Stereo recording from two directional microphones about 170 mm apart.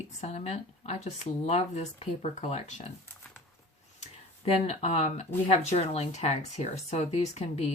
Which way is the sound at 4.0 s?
40° left (ahead or behind).